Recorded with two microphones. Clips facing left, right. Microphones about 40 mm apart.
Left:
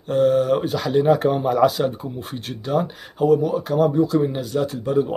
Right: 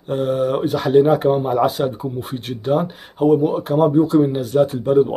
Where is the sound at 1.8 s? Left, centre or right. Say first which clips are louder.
Right 1 dB; centre.